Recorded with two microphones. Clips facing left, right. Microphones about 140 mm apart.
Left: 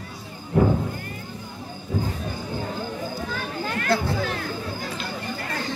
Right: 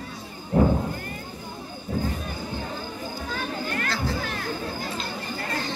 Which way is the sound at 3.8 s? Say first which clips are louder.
Left 5 dB; 55° left (ahead or behind).